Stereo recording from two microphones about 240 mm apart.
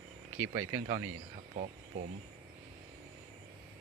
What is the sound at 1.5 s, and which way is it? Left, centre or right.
Speech, right.